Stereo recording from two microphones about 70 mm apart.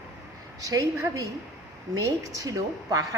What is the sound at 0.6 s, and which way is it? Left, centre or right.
A woman's voice, right.